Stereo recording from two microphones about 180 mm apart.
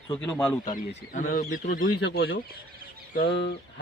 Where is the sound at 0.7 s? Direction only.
45° left (ahead or behind).